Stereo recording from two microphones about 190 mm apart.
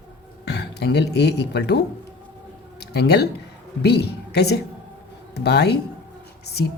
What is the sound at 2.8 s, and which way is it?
A woman's voice, 60° left (ahead or behind).